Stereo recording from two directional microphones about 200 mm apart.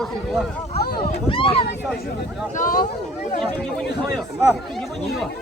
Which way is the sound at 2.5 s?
45° left (ahead or behind).